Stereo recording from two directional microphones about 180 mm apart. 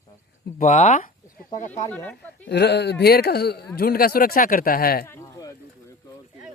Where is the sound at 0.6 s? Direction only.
40° left (ahead or behind).